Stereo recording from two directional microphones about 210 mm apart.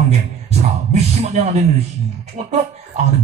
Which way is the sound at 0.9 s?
30° right (ahead or behind).